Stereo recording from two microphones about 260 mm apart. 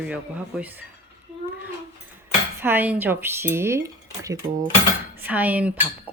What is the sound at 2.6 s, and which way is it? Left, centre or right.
Cutlery, centre.